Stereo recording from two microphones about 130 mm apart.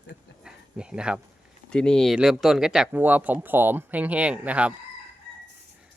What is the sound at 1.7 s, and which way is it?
Speech, 5° left (ahead or behind).